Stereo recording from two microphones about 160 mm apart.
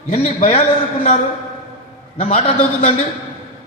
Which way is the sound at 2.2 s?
40° left (ahead or behind).